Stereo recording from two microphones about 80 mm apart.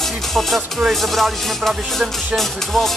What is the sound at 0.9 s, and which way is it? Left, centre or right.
Music, centre.